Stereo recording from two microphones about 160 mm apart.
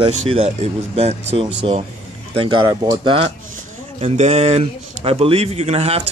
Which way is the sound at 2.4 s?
30° right (ahead or behind).